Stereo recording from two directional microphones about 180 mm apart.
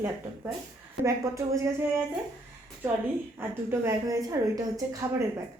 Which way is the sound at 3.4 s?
15° right (ahead or behind).